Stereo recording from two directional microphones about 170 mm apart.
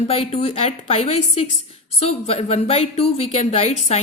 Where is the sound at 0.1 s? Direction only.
35° left (ahead or behind).